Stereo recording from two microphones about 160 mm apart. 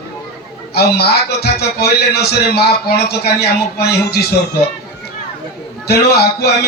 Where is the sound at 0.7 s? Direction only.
80° left.